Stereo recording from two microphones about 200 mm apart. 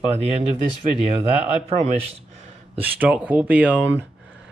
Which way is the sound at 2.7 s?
5° right (ahead or behind).